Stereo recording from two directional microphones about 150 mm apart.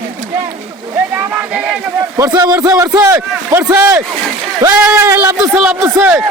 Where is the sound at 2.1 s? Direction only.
25° right (ahead or behind).